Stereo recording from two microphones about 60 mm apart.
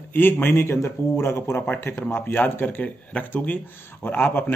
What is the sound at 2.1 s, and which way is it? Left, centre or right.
Speech, left.